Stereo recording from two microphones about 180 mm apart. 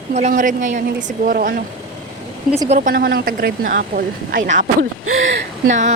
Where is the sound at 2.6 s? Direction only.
50° right (ahead or behind).